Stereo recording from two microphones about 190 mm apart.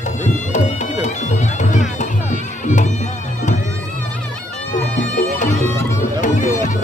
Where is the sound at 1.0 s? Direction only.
40° left (ahead or behind).